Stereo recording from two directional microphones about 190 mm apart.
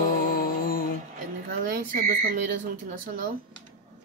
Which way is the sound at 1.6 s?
50° right (ahead or behind).